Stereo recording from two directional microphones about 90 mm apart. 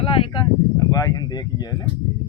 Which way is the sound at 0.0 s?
90° left.